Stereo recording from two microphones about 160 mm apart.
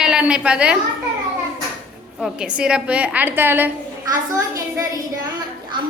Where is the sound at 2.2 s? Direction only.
5° right (ahead or behind).